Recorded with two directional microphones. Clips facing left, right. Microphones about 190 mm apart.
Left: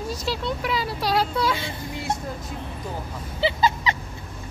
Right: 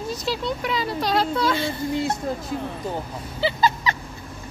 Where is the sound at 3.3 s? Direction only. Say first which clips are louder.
Even; 20° left (ahead or behind).